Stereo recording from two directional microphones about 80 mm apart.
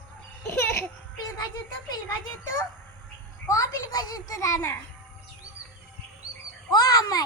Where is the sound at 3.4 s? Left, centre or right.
Left.